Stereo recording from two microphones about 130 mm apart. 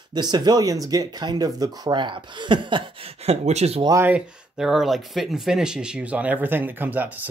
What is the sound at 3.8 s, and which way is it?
Speech, 25° right (ahead or behind).